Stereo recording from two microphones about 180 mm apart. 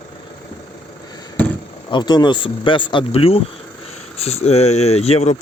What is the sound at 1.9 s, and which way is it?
Speech, 25° left (ahead or behind).